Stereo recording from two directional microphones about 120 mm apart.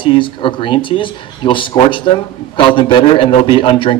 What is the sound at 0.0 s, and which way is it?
Speech, 45° left (ahead or behind).